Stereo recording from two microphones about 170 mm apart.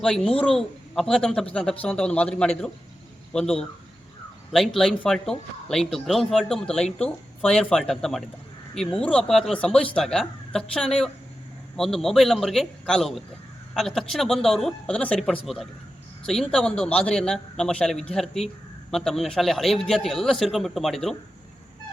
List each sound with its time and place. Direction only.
0.0 s a man's voice: centre (ahead or behind)